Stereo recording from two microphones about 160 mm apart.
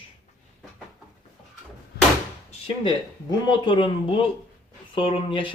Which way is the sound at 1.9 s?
85° left.